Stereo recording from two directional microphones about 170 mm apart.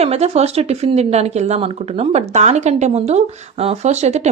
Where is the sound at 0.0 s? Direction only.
40° right (ahead or behind).